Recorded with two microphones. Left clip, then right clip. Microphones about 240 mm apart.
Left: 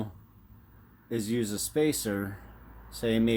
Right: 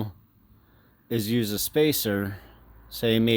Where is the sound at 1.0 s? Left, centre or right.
Right.